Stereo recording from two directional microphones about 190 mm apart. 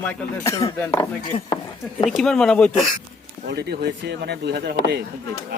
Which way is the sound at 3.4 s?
60° right (ahead or behind).